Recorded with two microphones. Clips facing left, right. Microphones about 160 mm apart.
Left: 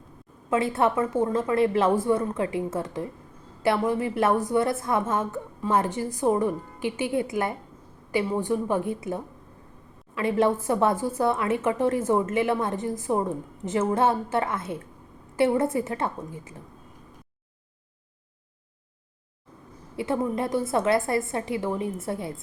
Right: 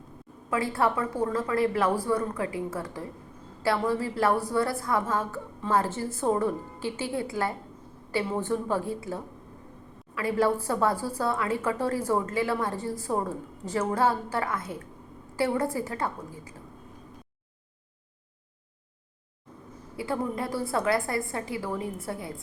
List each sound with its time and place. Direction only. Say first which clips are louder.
0.5 s a woman's voice: left 3 dB; 25° left (ahead or behind)
20.0 s a woman's voice: left 4 dB; 25° left (ahead or behind)